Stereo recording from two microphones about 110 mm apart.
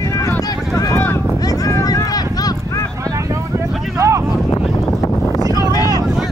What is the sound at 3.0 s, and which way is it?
Vehicle, 30° right (ahead or behind).